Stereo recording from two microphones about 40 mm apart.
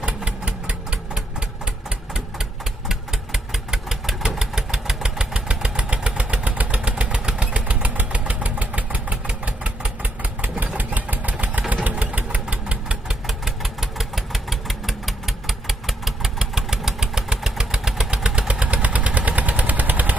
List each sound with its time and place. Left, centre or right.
0.0 s engine: right
3.7 s engine: centre; by 7.1 s right
7.1 s vehicle: right
10.4 s engine: right
10.8 s vehicle: right
11.7 s engine: right
13.1 s engine: centre; by 18.4 s right
18.5 s vehicle: right